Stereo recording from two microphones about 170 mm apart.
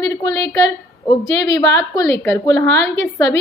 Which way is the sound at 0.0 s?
20° left (ahead or behind).